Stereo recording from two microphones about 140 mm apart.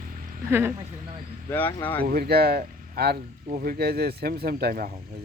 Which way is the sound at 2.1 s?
90° right.